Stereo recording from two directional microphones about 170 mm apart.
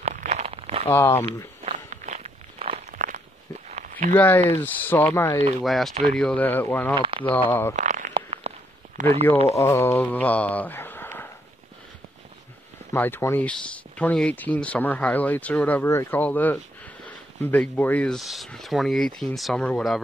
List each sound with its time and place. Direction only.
0.0 s a sound: 45° right (ahead or behind)
0.8 s speech: 15° left (ahead or behind)
1.2 s walk: 40° right (ahead or behind)
2.9 s walk: 50° right (ahead or behind)
3.6 s a sound: 45° right (ahead or behind)
4.1 s speech: 10° left (ahead or behind)
5.6 s speech: centre (ahead or behind)
7.0 s speech: 30° right (ahead or behind)
7.4 s speech: 10° left (ahead or behind)
7.7 s a sound: 45° right (ahead or behind)
9.6 s speech: 15° left (ahead or behind)
12.9 s speech: 10° left (ahead or behind)